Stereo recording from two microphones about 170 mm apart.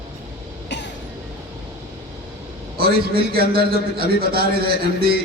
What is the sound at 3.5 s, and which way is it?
A man's voice, 65° right (ahead or behind).